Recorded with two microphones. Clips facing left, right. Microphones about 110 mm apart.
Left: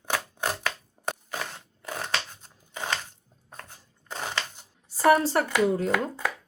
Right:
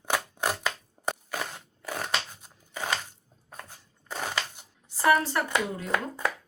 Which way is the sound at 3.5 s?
5° right (ahead or behind).